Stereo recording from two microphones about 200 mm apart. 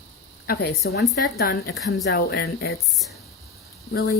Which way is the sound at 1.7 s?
Centre (ahead or behind).